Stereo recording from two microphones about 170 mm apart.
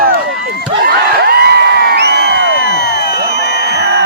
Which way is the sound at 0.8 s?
70° right (ahead or behind).